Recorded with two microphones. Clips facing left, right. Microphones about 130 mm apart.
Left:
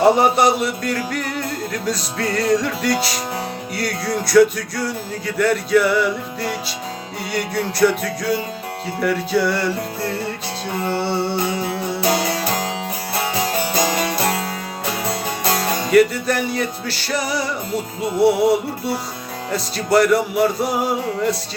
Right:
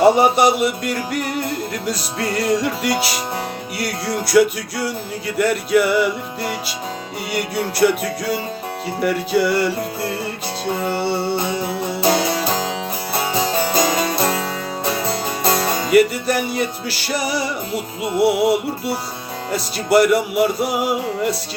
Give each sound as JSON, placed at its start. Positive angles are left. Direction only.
{"t": 0.0, "sound": "music", "side_deg": -5}
{"t": 11.9, "sound": "music", "side_deg": -25}
{"t": 15.9, "sound": "music", "side_deg": -5}